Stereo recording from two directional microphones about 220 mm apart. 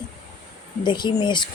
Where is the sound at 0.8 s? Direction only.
20° left (ahead or behind).